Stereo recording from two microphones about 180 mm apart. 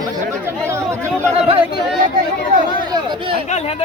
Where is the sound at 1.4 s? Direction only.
30° right (ahead or behind).